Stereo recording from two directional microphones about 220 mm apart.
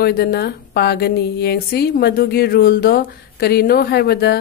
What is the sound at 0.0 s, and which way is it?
Speech, 45° left (ahead or behind).